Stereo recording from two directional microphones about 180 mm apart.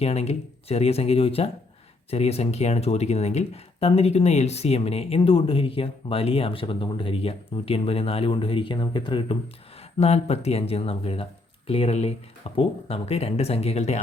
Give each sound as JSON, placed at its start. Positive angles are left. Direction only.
{"t": 0.0, "sound": "speech", "side_deg": 35}
{"t": 10.0, "sound": "speech", "side_deg": 35}